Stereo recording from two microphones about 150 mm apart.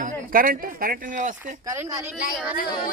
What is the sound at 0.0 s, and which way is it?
Speech, 70° right (ahead or behind).